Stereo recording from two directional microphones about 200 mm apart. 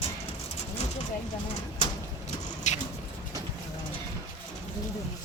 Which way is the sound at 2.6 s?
35° left (ahead or behind).